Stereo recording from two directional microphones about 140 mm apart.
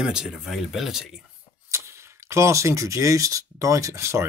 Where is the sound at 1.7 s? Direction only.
20° right (ahead or behind).